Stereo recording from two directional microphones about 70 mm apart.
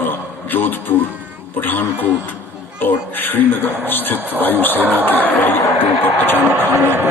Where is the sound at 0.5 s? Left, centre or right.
Left.